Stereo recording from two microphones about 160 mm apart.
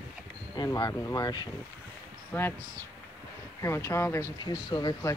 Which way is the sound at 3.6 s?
15° left (ahead or behind).